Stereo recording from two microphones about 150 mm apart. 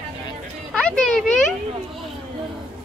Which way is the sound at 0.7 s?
5° left (ahead or behind).